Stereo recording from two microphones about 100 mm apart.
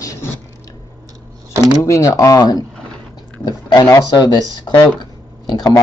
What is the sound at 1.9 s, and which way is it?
Speech, 35° left (ahead or behind).